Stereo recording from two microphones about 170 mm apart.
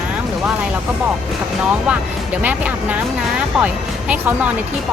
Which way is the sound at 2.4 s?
10° right (ahead or behind).